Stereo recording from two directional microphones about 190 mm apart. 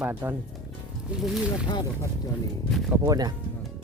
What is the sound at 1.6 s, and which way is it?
Speech, 20° left (ahead or behind).